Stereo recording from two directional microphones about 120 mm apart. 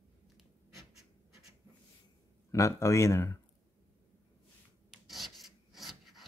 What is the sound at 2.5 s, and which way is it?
Speech, 25° left (ahead or behind).